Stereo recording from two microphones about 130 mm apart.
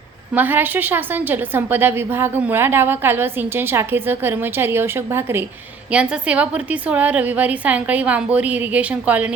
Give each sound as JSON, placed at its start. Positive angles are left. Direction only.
{"t": 0.3, "sound": "a woman's voice", "side_deg": -15}